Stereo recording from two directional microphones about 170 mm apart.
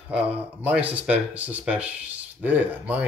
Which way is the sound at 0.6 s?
10° right (ahead or behind).